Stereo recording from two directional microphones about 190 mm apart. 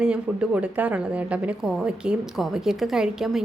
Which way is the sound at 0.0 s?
5° right (ahead or behind).